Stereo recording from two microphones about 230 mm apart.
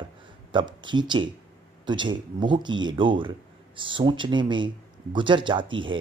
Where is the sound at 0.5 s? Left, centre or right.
Right.